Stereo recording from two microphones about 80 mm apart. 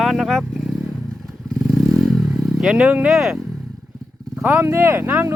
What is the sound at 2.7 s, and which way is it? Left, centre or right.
Speech, centre.